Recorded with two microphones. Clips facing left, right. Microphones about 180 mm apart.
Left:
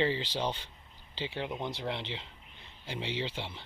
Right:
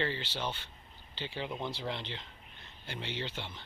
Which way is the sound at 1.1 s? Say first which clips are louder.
Left 3 dB; 90° left.